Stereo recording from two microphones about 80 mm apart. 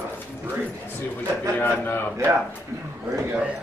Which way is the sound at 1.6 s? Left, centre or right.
Left.